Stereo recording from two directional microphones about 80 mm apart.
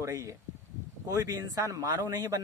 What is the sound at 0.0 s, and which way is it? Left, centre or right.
Speech, right.